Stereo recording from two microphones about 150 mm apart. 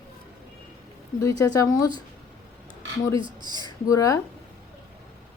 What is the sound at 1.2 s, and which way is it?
Speech, 20° left (ahead or behind).